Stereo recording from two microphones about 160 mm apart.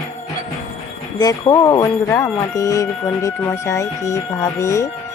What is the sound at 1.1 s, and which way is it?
Speech, 25° left (ahead or behind).